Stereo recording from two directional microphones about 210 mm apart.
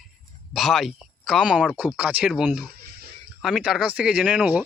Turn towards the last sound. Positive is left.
turn(degrees=-5)  # may be behind; listen again after turning